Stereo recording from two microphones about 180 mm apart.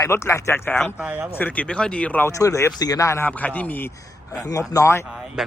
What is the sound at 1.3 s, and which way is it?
A man's voice, 10° left (ahead or behind).